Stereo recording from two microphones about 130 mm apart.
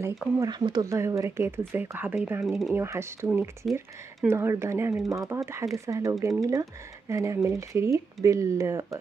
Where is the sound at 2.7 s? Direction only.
20° right (ahead or behind).